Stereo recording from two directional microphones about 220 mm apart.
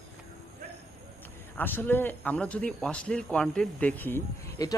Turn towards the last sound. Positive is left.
turn(degrees=15)  # may be behind; listen again after turning